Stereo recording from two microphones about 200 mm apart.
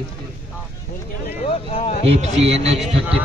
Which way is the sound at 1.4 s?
30° left (ahead or behind).